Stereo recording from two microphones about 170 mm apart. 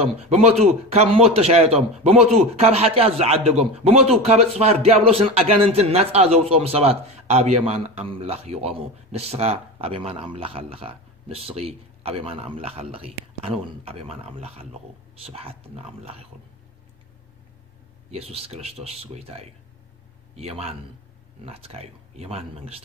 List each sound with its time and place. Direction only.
0.3 s a man's voice: 40° right (ahead or behind)
18.1 s a man's voice: 35° right (ahead or behind)